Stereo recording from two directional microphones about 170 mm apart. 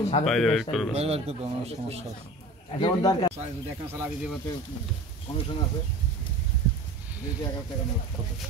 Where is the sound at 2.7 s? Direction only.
25° left (ahead or behind).